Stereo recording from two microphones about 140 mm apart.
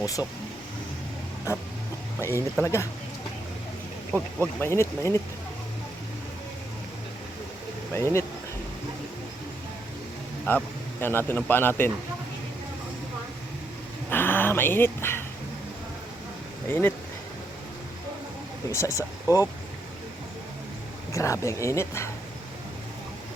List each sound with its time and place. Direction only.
0.0 s speech: 25° left (ahead or behind)
2.2 s speech: 20° left (ahead or behind)
4.1 s speech: 15° left (ahead or behind)
7.9 s speech: 20° left (ahead or behind)
10.5 s a man's voice: 15° left (ahead or behind)
14.1 s dog: 15° left (ahead or behind)
16.6 s a man's voice: 15° left (ahead or behind)
18.7 s speech: 20° left (ahead or behind)
21.1 s speech: 20° left (ahead or behind)